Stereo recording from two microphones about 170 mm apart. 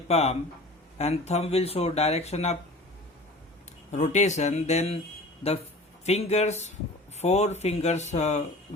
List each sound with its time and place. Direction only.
0.1 s speech: 40° left (ahead or behind)
3.9 s speech: 45° left (ahead or behind)
6.1 s speech: 40° left (ahead or behind)